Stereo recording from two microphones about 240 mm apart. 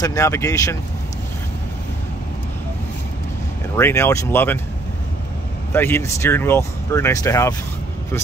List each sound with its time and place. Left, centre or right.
0.0 s speech: centre
3.7 s speech: centre
5.7 s speech: centre